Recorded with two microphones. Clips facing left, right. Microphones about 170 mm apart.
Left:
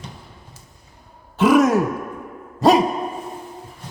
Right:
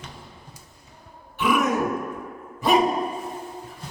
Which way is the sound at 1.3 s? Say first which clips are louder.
Left 8 dB; 90° left.